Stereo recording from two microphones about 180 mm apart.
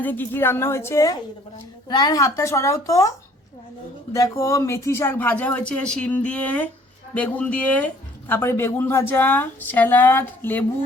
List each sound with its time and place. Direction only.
0.0 s speech: 10° left (ahead or behind)
4.1 s speech: 15° left (ahead or behind)